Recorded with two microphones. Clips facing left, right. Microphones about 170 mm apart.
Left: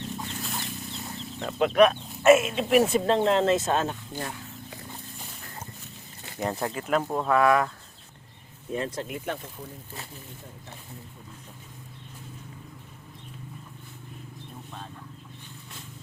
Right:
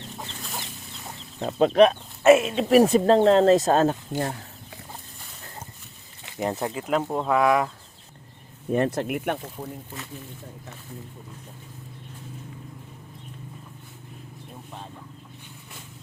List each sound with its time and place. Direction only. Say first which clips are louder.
1.4 s speech: right 3 dB; 35° right (ahead or behind)
6.4 s speech: right 2 dB; 20° right (ahead or behind)
8.7 s speech: right 7 dB; 65° right (ahead or behind)